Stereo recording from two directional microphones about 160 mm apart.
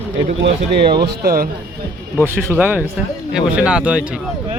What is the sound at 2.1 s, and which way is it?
Speech, 15° right (ahead or behind).